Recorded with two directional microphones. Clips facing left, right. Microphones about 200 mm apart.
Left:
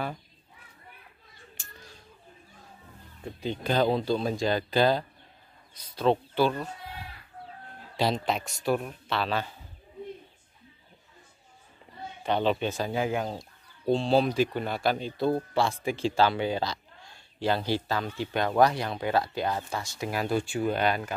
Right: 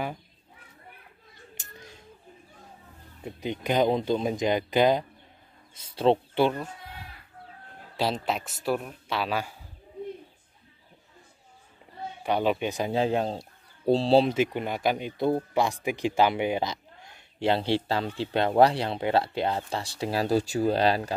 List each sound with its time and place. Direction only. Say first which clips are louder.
1.6 s a sound: right 3 dB; 20° right (ahead or behind)
3.3 s speech: right 1 dB; 15° right (ahead or behind)
8.0 s a man's voice: left 1 dB; 5° right (ahead or behind)
12.2 s speech: right 1 dB; 10° right (ahead or behind)
12.9 s speech: right 3 dB; 30° right (ahead or behind)